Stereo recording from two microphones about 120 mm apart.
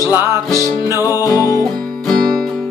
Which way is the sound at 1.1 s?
30° left (ahead or behind).